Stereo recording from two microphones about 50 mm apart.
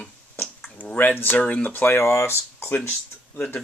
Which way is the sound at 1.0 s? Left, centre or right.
Left.